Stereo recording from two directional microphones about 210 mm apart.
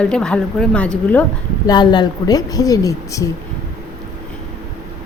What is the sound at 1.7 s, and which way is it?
Speech, 20° left (ahead or behind).